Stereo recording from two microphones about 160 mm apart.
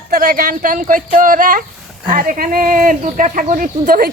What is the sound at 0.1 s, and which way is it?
Speech, 65° right (ahead or behind).